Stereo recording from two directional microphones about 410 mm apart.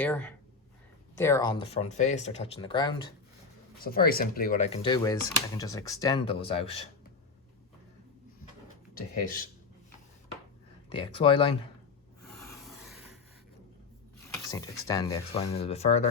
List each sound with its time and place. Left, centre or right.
0.0 s speech: centre
3.8 s speech: left
9.2 s speech: centre
10.9 s speech: centre
12.4 s rub: centre
14.3 s speech: centre